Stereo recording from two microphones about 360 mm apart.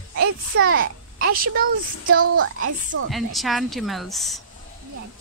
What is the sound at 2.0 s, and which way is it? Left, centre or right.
A woman's voice, right.